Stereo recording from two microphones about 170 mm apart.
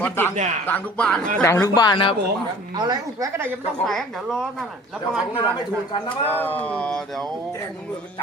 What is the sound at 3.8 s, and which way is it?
Speech, centre (ahead or behind).